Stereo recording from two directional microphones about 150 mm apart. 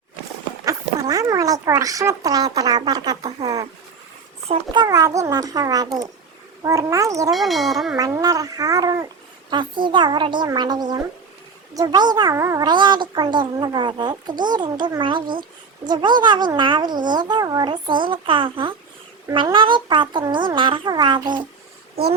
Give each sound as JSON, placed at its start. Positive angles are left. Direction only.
{"t": 0.6, "sound": "a child's voice", "side_deg": -25}
{"t": 4.4, "sound": "a child's voice", "side_deg": -35}
{"t": 7.3, "sound": "speech", "side_deg": 0}
{"t": 7.9, "sound": "a child's voice", "side_deg": -25}